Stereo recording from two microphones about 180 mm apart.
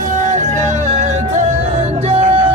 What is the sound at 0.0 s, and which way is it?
Music, 45° right (ahead or behind).